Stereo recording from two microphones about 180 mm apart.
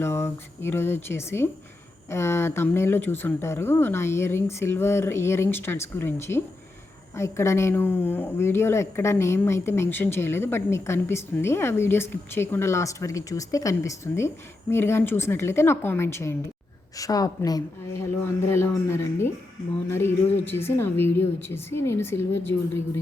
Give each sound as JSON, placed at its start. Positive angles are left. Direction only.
{"t": 0.0, "sound": "a woman's voice", "side_deg": 15}